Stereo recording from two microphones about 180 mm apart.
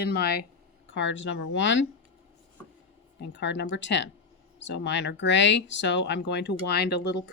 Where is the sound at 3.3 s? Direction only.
80° left.